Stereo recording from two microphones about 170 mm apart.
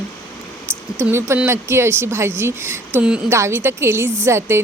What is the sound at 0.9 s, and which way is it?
A woman's voice, 15° right (ahead or behind).